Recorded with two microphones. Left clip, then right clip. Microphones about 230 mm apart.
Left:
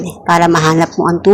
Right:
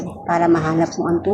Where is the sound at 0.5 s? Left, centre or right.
Left.